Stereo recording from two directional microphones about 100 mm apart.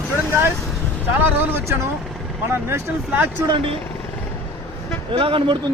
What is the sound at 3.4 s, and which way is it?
Speech, 50° right (ahead or behind).